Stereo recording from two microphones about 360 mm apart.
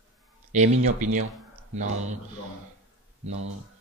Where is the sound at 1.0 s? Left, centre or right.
Right.